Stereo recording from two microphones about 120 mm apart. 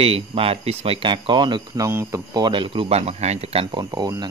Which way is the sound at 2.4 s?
45° right (ahead or behind).